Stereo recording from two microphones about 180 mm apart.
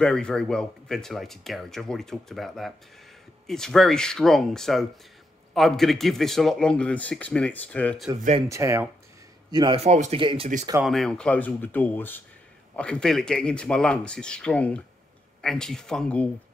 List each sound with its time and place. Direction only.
0.0 s speech: 5° left (ahead or behind)
8.5 s speech: 15° right (ahead or behind)
9.5 s a man's voice: 25° right (ahead or behind)
10.8 s speech: centre (ahead or behind)